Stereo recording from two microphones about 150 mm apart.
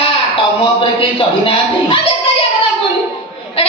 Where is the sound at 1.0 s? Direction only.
35° left (ahead or behind).